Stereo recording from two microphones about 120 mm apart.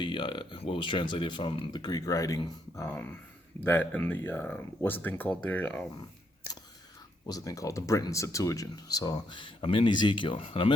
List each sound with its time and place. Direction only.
0.0 s speech: 45° left (ahead or behind); by 2.4 s 30° left (ahead or behind)
2.9 s speech: 15° left (ahead or behind)
7.3 s speech: 30° left (ahead or behind); by 10.8 s 45° left (ahead or behind)